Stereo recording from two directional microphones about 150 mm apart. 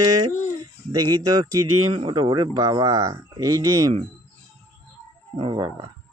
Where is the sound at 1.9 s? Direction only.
35° right (ahead or behind).